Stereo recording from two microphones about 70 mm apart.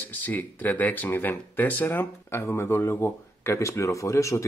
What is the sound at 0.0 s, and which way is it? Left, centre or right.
Speech, left.